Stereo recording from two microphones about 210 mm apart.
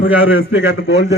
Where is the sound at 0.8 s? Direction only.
55° left (ahead or behind).